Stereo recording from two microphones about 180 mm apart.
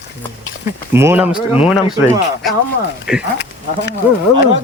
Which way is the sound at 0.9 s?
10° right (ahead or behind).